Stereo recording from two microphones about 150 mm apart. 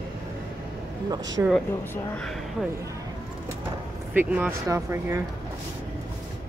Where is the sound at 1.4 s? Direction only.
20° right (ahead or behind).